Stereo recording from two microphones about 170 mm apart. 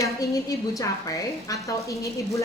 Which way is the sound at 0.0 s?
20° left (ahead or behind).